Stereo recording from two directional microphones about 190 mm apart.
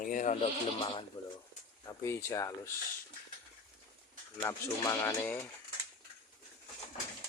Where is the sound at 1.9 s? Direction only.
15° left (ahead or behind).